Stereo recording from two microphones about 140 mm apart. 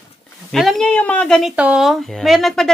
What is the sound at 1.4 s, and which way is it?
Speech, 5° right (ahead or behind).